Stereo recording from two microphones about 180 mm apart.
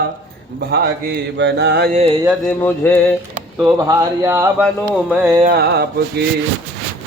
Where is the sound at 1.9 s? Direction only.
35° right (ahead or behind).